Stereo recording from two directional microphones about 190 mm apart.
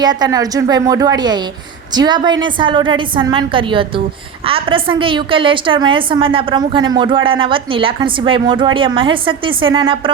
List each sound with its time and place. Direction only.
0.0 s a woman's voice: 20° right (ahead or behind)